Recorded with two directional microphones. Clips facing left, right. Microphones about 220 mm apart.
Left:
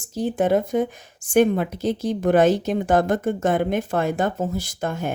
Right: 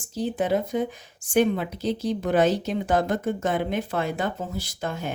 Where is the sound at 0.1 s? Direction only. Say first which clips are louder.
Left 4 dB; 50° left (ahead or behind).